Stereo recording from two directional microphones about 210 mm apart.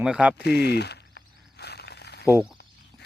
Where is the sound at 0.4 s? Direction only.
55° left (ahead or behind).